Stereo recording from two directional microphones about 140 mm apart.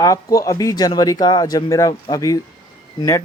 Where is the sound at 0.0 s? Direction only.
25° left (ahead or behind).